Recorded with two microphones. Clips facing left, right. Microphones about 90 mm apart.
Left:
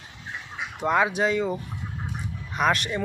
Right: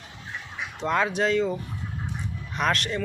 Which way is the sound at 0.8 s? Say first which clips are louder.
Left 2 dB; 10° left (ahead or behind).